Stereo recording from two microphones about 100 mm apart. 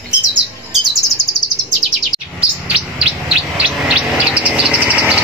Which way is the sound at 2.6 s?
10° right (ahead or behind).